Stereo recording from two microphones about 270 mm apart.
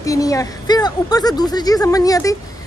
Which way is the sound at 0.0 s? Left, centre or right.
Centre.